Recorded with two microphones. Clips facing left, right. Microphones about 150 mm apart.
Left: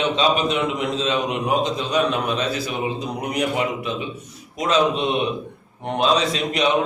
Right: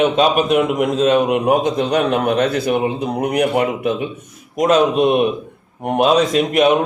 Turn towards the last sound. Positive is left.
turn(degrees=-55)  # may be behind; listen again after turning